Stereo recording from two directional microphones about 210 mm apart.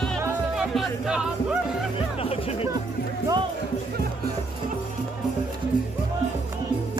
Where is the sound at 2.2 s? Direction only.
25° left (ahead or behind).